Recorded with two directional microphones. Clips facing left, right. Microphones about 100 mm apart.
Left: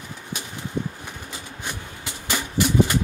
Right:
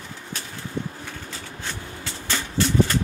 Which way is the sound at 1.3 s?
15° left (ahead or behind).